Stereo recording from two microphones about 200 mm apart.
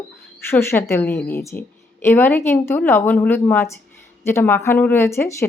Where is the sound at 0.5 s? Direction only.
10° left (ahead or behind).